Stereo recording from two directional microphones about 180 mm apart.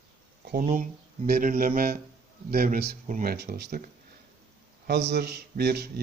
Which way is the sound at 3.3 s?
65° right (ahead or behind).